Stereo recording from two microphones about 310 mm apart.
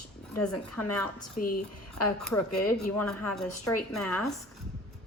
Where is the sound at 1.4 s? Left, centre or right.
Left.